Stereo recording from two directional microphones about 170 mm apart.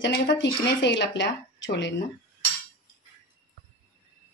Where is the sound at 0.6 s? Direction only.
90° left.